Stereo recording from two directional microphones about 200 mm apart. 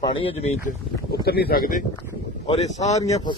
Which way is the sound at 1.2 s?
50° left (ahead or behind).